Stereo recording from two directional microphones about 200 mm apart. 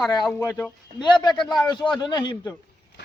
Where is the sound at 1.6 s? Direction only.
20° left (ahead or behind).